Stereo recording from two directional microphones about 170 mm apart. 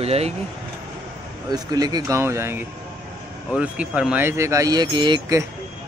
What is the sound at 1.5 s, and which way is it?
Speech, 25° right (ahead or behind).